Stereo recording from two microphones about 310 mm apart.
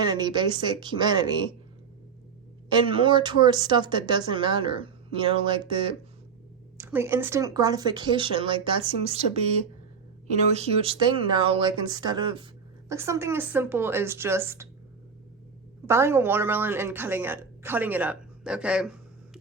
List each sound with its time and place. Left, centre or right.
0.0 s a woman's voice: centre
2.7 s a woman's voice: centre
10.5 s a woman's voice: centre
15.9 s a woman's voice: centre